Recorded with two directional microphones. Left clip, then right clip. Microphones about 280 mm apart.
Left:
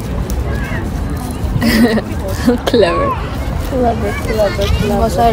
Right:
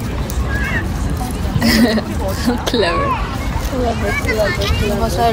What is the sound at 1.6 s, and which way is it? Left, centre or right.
Speech, centre.